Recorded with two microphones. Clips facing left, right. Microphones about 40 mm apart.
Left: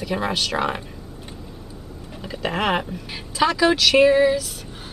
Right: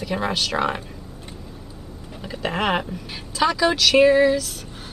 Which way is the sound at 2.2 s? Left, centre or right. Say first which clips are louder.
Even; centre.